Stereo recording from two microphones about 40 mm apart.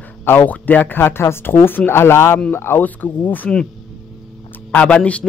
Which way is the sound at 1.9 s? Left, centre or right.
Left.